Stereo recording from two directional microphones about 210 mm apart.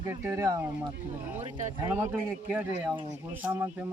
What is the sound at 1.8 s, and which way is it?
A man's voice, 10° right (ahead or behind).